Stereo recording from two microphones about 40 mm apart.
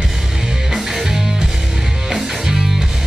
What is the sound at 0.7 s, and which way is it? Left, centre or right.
Music, centre.